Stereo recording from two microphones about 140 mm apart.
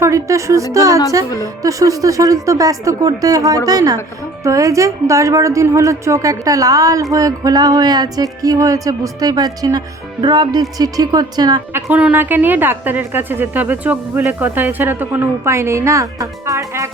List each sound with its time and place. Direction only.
0.0 s a woman's voice: 20° right (ahead or behind)
11.7 s a woman's voice: 10° right (ahead or behind)